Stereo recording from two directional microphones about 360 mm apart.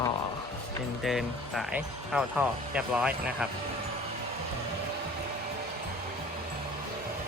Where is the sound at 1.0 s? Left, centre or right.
Centre.